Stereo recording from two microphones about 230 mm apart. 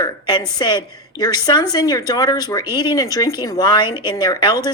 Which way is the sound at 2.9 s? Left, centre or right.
Centre.